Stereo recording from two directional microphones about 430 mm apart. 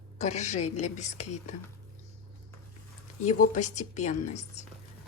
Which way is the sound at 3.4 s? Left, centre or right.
Centre.